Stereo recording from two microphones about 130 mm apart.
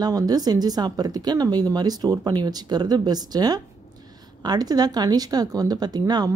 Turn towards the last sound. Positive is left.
turn(degrees=-30)  # may be behind; listen again after turning